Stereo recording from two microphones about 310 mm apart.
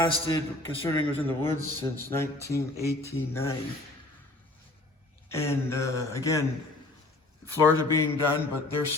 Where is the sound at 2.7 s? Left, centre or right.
Left.